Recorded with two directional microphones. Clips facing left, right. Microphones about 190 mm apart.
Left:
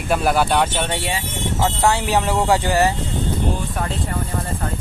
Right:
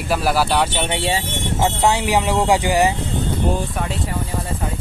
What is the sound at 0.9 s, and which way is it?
Speech, 20° right (ahead or behind).